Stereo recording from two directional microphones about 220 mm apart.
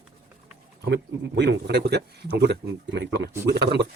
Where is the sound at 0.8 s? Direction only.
50° right (ahead or behind).